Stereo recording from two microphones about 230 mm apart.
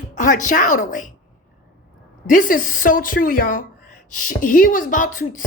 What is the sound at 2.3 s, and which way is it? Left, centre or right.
A woman's voice, left.